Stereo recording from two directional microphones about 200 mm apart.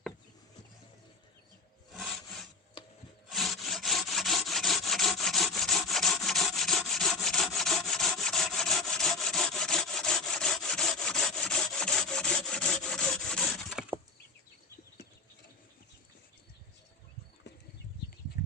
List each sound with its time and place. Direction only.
1.9 s rub: centre (ahead or behind)
2.8 s rub: 25° left (ahead or behind)
3.2 s wood: centre (ahead or behind)